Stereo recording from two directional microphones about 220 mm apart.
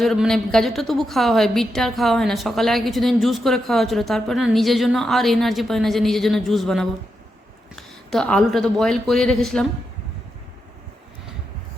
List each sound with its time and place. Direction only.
0.0 s a woman's voice: centre (ahead or behind)